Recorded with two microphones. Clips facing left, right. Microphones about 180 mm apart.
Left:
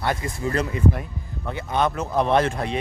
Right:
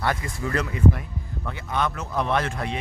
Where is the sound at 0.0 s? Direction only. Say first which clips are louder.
Left 2 dB; 25° left (ahead or behind).